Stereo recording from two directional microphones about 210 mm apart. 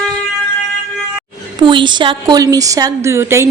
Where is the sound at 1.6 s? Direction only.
20° right (ahead or behind).